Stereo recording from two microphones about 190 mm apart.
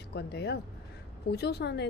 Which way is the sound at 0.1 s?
60° left (ahead or behind).